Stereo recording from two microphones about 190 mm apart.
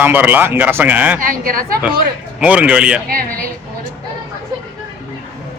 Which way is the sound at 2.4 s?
5° right (ahead or behind).